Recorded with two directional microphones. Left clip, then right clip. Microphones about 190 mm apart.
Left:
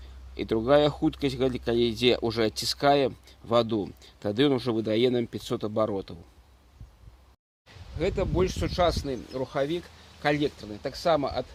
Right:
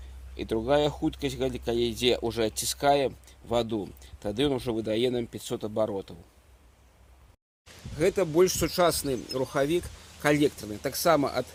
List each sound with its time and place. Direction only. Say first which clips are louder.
0.3 s speech: left 3 dB; 50° left (ahead or behind)
7.9 s speech: right 4 dB; 30° right (ahead or behind)